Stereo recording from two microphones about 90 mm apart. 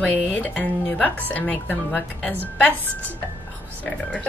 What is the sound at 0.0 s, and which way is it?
Speech, 20° left (ahead or behind).